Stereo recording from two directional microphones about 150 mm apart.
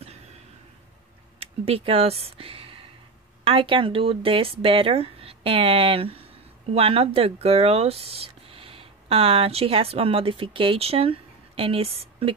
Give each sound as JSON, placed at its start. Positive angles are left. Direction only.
{"t": 1.4, "sound": "speech", "side_deg": -40}